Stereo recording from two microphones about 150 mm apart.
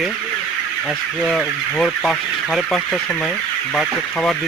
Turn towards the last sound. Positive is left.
turn(degrees=0)  # may be behind; listen again after turning